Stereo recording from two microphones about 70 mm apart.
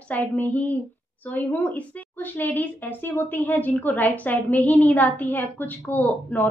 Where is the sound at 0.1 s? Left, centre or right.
Left.